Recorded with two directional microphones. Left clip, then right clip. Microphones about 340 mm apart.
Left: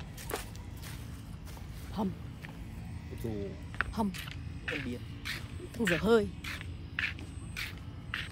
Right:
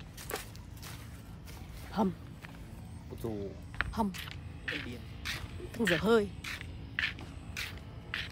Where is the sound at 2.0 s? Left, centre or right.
Centre.